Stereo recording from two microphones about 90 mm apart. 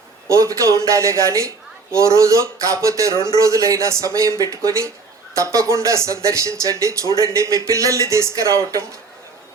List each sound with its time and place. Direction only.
0.3 s a woman's voice: 35° right (ahead or behind)